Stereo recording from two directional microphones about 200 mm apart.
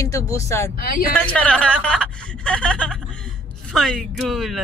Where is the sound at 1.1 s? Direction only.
5° left (ahead or behind).